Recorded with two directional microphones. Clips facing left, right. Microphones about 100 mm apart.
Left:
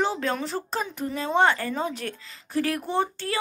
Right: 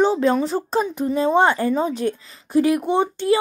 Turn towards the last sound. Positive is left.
turn(degrees=-20)  # may be behind; listen again after turning